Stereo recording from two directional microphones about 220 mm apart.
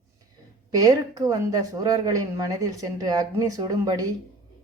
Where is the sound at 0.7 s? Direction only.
15° right (ahead or behind).